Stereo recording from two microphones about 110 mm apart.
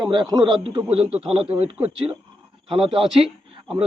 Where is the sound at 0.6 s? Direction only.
60° right (ahead or behind).